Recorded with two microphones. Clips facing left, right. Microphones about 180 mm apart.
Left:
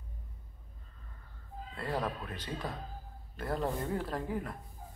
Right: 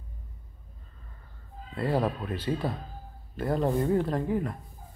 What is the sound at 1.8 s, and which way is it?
Speech, 30° right (ahead or behind).